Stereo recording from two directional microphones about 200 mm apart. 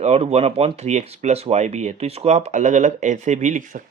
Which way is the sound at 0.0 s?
30° right (ahead or behind).